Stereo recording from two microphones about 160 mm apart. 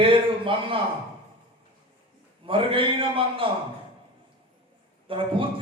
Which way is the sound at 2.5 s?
35° right (ahead or behind).